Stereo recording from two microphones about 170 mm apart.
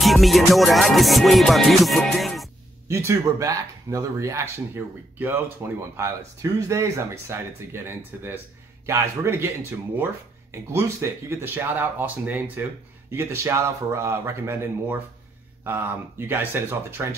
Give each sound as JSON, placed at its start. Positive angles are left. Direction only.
{"t": 0.0, "sound": "music", "side_deg": 0}
{"t": 2.9, "sound": "speech", "side_deg": -15}
{"t": 10.5, "sound": "speech", "side_deg": -15}